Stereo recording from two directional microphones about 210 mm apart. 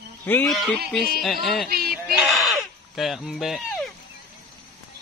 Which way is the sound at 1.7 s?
45° right (ahead or behind).